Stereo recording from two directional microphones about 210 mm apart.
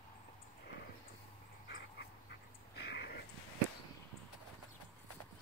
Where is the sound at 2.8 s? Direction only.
50° left (ahead or behind).